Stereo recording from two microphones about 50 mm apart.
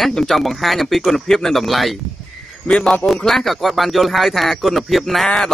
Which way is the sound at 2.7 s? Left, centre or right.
Centre.